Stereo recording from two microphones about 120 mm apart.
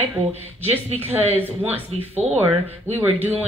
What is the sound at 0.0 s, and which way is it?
Speech, 15° right (ahead or behind).